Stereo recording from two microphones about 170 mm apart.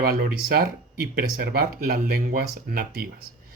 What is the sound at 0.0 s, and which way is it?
Speech, 60° right (ahead or behind).